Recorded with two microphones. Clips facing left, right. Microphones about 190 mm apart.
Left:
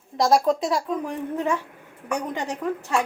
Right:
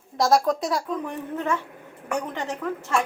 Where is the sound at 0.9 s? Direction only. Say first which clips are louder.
Left 2 dB; 15° left (ahead or behind).